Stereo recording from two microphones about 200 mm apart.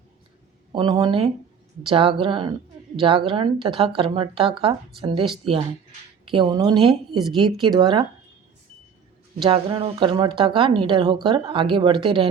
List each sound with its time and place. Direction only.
0.7 s speech: 25° right (ahead or behind)
7.2 s speech: centre (ahead or behind)
7.5 s speech: 20° right (ahead or behind)
9.5 s speech: 25° right (ahead or behind)